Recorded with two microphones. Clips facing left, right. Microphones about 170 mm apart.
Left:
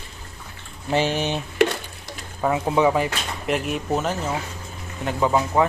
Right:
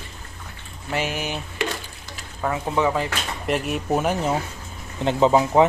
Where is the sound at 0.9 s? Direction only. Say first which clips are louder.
Left 5 dB; 30° left (ahead or behind).